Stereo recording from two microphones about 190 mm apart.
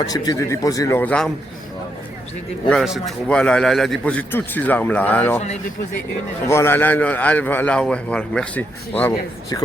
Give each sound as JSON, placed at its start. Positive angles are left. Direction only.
{"t": 0.0, "sound": "a man's voice", "side_deg": 20}
{"t": 2.6, "sound": "a man's voice", "side_deg": 0}
{"t": 6.5, "sound": "a man's voice", "side_deg": 10}